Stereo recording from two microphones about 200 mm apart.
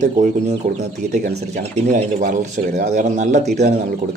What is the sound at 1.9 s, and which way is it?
Speech, 40° right (ahead or behind).